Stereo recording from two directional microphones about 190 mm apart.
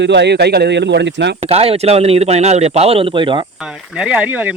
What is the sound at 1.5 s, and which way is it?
A man's voice, 30° right (ahead or behind).